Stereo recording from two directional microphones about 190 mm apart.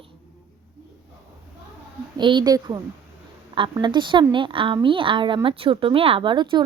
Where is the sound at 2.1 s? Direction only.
25° right (ahead or behind).